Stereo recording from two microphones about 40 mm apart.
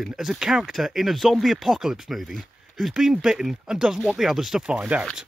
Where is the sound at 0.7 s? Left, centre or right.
Centre.